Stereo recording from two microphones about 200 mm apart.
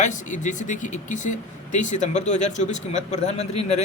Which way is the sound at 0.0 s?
40° left (ahead or behind).